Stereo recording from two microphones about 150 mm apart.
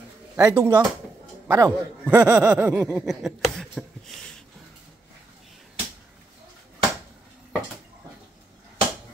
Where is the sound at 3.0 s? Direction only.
Centre (ahead or behind).